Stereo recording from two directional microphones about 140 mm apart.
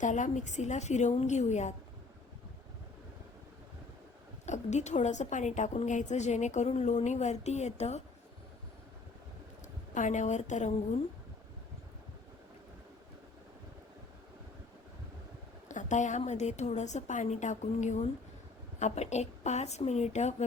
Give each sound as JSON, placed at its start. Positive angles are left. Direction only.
{"t": 0.0, "sound": "a woman's voice", "side_deg": 60}
{"t": 4.4, "sound": "a woman's voice", "side_deg": 55}
{"t": 9.9, "sound": "a woman's voice", "side_deg": 60}
{"t": 15.7, "sound": "a woman's voice", "side_deg": 65}